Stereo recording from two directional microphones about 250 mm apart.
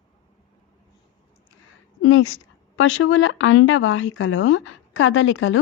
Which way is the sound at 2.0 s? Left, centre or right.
Left.